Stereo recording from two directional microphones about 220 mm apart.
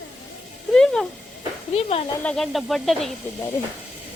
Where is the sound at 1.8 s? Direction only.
25° left (ahead or behind).